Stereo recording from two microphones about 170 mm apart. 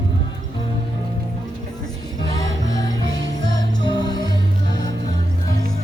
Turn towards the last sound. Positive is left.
turn(degrees=25)  # may be behind; listen again after turning